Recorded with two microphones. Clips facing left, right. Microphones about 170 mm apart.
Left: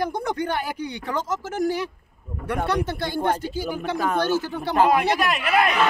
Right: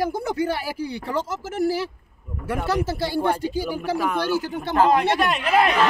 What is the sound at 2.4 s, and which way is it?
Speech, 5° right (ahead or behind).